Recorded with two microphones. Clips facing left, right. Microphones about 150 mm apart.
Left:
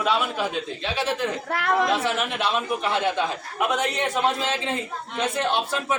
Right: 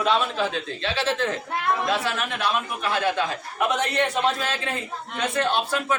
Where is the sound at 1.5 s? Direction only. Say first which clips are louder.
Left 7 dB; 85° left.